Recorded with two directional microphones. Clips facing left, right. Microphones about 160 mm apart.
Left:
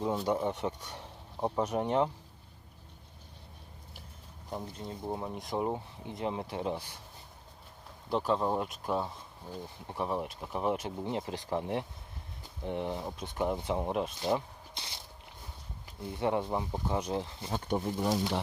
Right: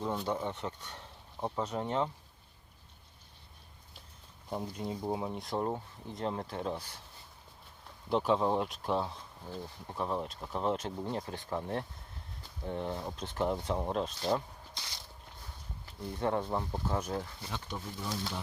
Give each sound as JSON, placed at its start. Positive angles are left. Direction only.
{"t": 0.0, "sound": "speech", "side_deg": 10}
{"t": 4.5, "sound": "speech", "side_deg": -5}
{"t": 5.6, "sound": "speech", "side_deg": 10}
{"t": 8.3, "sound": "speech", "side_deg": 0}
{"t": 15.9, "sound": "speech", "side_deg": 15}
{"t": 17.5, "sound": "speech", "side_deg": 50}